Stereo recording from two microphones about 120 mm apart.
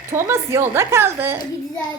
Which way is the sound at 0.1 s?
20° right (ahead or behind).